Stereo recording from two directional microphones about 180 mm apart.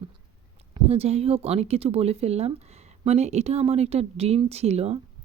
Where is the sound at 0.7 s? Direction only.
35° right (ahead or behind).